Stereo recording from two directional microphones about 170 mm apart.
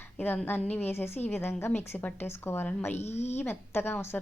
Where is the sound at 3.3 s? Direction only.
15° left (ahead or behind).